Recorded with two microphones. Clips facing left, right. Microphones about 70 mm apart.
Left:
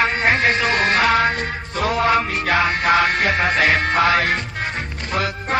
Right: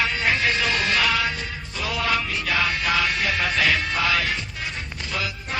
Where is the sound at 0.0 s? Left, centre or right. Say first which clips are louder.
Left 5 dB; left.